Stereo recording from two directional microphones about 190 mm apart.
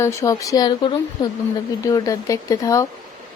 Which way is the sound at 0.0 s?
15° left (ahead or behind).